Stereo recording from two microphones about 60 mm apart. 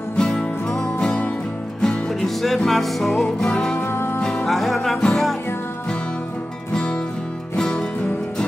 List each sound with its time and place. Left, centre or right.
0.2 s music: centre
1.8 s music: centre
3.8 s music: left
4.5 s music: centre
6.7 s music: centre